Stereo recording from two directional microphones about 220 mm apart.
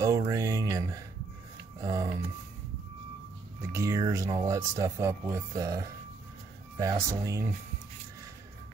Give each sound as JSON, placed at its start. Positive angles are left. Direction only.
{"t": 0.0, "sound": "music", "side_deg": -15}
{"t": 1.8, "sound": "a sound", "side_deg": -15}
{"t": 3.7, "sound": "speech", "side_deg": -15}